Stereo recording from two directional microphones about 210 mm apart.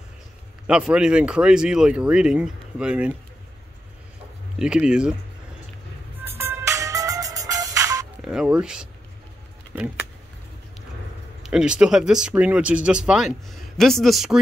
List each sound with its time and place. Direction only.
0.7 s speech: 5° right (ahead or behind)
4.6 s speech: 5° right (ahead or behind)
6.2 s music: 10° right (ahead or behind)
8.2 s speech: 5° right (ahead or behind)
11.4 s speech: 5° right (ahead or behind)